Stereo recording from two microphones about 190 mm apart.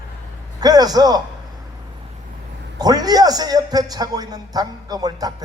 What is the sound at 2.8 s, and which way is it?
A man's voice, 20° right (ahead or behind).